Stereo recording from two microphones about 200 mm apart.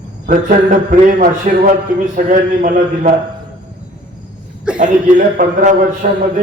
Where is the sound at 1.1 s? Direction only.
40° right (ahead or behind).